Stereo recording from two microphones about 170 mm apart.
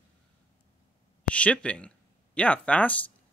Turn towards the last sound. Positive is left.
turn(degrees=10)  # may be behind; listen again after turning